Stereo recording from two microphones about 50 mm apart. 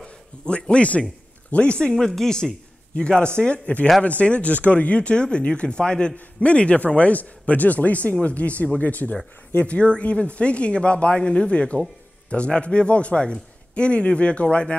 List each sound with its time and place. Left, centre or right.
0.0 s a sound: centre
1.5 s speech: left
3.0 s a man's voice: left